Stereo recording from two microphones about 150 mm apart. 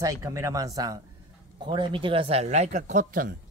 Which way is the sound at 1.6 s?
35° right (ahead or behind).